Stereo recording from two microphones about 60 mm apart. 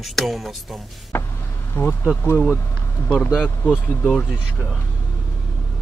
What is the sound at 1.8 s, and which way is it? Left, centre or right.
Speech, left.